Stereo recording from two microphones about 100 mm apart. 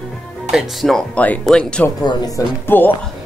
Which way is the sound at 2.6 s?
20° left (ahead or behind).